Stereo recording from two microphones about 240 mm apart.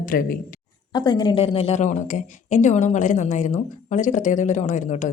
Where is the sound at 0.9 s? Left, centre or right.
Centre.